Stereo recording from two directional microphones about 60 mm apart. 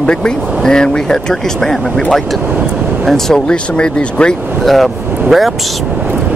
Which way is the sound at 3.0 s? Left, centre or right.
Centre.